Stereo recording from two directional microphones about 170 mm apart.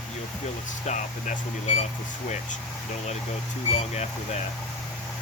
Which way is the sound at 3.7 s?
40° left (ahead or behind).